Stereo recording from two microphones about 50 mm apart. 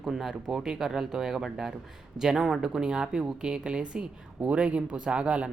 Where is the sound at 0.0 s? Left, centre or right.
Centre.